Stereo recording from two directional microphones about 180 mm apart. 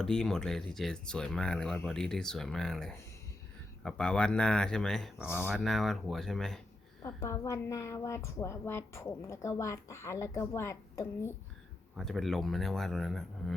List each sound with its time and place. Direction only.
0.0 s speech: 5° left (ahead or behind)
7.0 s a woman's voice: 15° left (ahead or behind)
11.9 s speech: centre (ahead or behind)